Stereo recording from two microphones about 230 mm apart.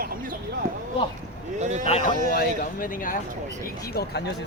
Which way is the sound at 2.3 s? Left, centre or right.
Left.